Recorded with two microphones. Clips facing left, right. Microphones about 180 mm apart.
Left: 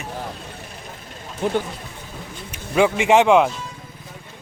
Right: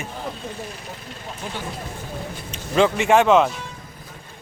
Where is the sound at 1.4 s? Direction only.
60° left (ahead or behind).